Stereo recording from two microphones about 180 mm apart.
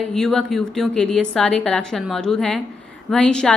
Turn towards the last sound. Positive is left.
turn(degrees=5)  # may be behind; listen again after turning